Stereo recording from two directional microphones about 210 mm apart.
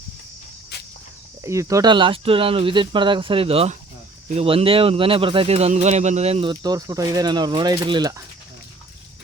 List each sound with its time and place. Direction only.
0.7 s cricket: 50° left (ahead or behind)
1.4 s speech: 15° right (ahead or behind)